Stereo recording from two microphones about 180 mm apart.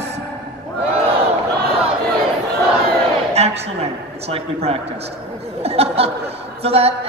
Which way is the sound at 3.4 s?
35° right (ahead or behind).